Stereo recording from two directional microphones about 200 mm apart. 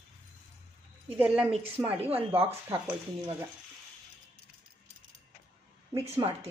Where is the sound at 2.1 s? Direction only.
30° right (ahead or behind).